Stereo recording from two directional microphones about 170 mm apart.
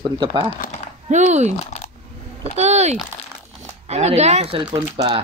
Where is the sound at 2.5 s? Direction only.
40° right (ahead or behind).